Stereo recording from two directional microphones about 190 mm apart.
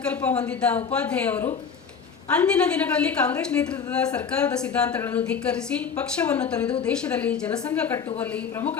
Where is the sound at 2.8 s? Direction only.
5° left (ahead or behind).